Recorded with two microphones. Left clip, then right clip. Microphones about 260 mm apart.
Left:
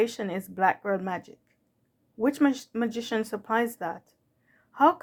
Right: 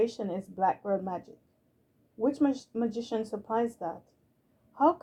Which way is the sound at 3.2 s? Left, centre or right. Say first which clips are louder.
Left 3 dB; left.